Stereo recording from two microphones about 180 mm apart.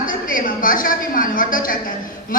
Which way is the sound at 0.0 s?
50° left (ahead or behind).